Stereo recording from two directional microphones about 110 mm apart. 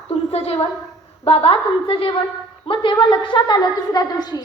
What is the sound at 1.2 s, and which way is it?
A woman's voice, 60° left (ahead or behind).